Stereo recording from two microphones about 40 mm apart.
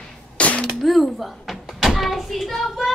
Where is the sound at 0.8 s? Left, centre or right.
Centre.